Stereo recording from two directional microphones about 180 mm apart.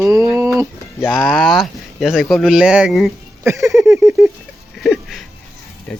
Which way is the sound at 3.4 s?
15° right (ahead or behind).